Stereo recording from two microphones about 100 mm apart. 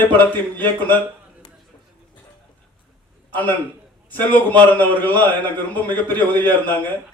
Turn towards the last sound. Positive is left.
turn(degrees=20)  # may be behind; listen again after turning